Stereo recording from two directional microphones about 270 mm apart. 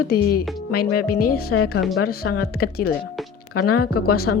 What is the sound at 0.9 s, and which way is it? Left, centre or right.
Speech, left.